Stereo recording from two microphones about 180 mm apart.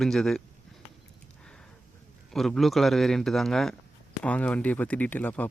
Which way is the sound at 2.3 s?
Centre (ahead or behind).